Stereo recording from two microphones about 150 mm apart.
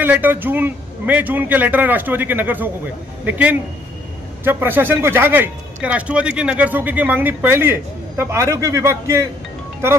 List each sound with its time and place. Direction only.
0.0 s a man's voice: 10° right (ahead or behind)